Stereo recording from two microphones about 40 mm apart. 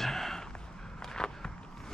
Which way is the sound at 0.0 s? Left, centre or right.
Centre.